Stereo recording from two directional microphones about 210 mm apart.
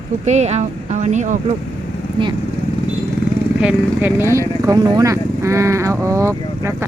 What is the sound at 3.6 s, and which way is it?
Speech, 5° right (ahead or behind).